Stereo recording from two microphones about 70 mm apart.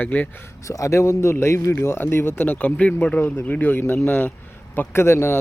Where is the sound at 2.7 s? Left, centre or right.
Centre.